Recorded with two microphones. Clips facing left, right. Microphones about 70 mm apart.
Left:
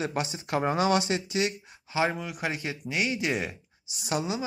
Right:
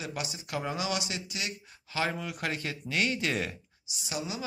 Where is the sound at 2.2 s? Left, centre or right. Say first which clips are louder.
Left 2 dB; centre.